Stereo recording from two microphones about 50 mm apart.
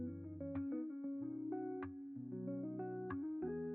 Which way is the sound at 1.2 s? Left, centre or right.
Centre.